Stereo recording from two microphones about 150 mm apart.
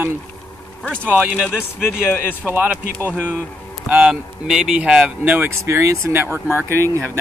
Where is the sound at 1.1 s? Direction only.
5° left (ahead or behind).